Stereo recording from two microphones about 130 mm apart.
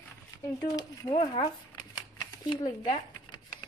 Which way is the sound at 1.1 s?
45° left (ahead or behind).